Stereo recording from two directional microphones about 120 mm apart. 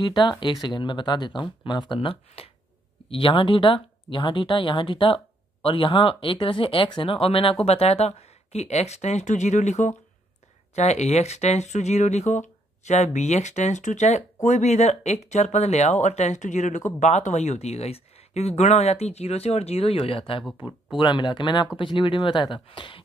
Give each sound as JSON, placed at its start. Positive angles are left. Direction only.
{"t": 0.0, "sound": "speech", "side_deg": 40}
{"t": 21.0, "sound": "speech", "side_deg": 40}